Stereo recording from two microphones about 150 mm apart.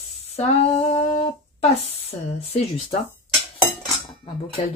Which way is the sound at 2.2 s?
40° left (ahead or behind).